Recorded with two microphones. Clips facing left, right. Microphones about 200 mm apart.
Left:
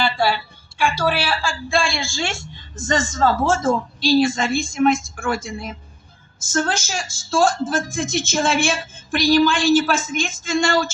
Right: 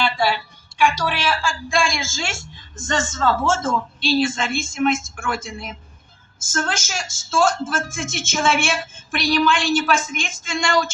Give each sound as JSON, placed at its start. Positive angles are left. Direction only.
{"t": 0.8, "sound": "a woman's voice", "side_deg": 35}